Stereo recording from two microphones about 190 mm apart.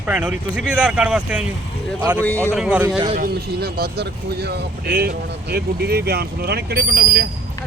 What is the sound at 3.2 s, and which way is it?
Speech, 55° right (ahead or behind).